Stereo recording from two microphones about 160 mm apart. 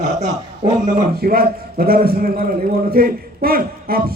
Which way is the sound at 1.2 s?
65° right (ahead or behind).